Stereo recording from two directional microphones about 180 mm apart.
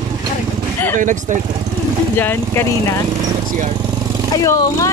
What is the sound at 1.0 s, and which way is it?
Speech, 45° right (ahead or behind).